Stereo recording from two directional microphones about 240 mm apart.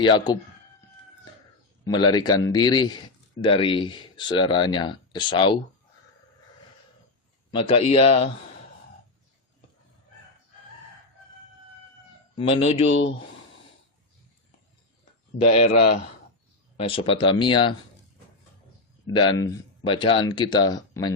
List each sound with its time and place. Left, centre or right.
0.0 s speech: centre
1.8 s speech: centre
7.5 s speech: left
12.4 s speech: left
12.9 s speech: left
16.7 s speech: left
19.1 s speech: centre